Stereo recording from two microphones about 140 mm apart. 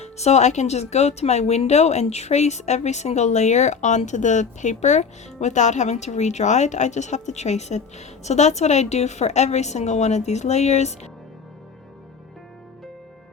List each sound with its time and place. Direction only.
0.0 s speech: 50° left (ahead or behind)